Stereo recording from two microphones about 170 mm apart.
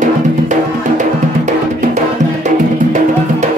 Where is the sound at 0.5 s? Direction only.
45° right (ahead or behind).